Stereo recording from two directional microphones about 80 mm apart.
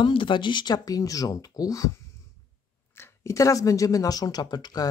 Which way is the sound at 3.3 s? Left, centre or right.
Left.